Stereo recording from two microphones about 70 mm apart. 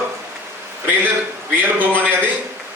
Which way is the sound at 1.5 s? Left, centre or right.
Right.